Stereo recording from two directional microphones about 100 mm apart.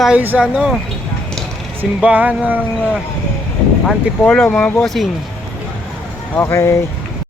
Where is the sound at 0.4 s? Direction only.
10° right (ahead or behind).